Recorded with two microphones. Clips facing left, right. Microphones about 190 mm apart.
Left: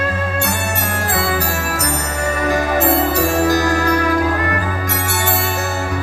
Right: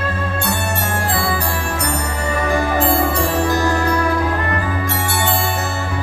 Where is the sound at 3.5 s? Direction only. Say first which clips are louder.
Left 2 dB; 30° right (ahead or behind).